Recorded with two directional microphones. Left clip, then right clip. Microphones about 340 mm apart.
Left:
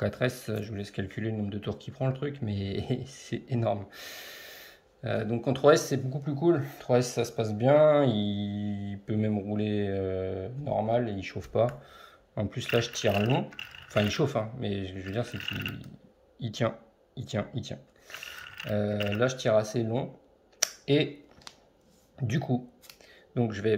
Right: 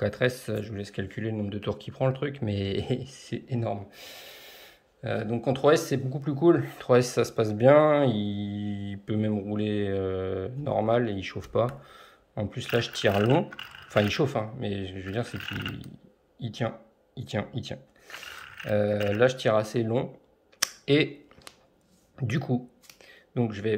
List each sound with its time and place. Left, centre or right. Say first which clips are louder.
0.0 s speech: right 3 dB; centre
20.5 s a sound: right 2 dB; centre
22.1 s speech: right 1 dB; centre